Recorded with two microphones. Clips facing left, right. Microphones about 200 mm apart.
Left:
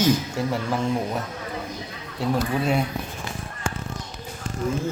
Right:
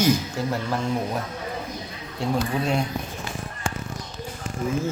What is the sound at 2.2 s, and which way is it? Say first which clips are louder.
Speech: left 1 dB; 5° left (ahead or behind).